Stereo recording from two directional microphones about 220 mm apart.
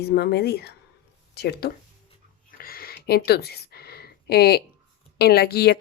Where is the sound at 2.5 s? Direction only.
40° left (ahead or behind).